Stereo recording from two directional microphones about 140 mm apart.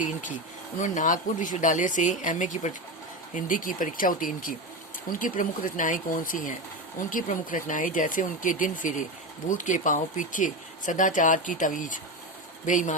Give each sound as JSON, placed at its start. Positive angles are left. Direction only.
{"t": 0.0, "sound": "speech", "side_deg": 65}
{"t": 3.3, "sound": "speech", "side_deg": 75}